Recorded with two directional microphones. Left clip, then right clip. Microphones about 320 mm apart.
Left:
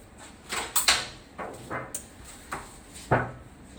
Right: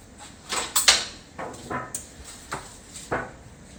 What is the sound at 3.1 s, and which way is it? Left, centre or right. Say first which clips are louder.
Drawer open or close: left 3 dB; left.